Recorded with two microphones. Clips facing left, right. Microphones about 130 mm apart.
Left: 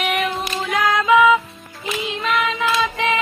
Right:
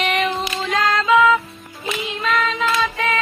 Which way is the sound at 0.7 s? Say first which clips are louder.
Left 1 dB; 15° left (ahead or behind).